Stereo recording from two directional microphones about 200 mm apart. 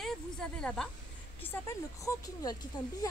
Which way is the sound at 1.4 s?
15° left (ahead or behind).